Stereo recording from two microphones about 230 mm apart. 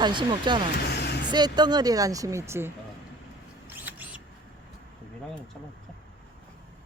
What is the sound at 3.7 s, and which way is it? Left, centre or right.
Mouse, centre.